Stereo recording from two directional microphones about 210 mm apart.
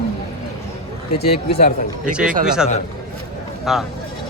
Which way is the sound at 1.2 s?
45° left (ahead or behind).